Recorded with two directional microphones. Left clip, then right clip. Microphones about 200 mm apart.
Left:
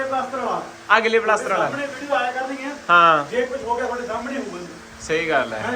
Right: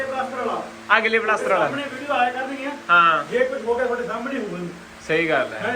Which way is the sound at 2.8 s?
20° left (ahead or behind).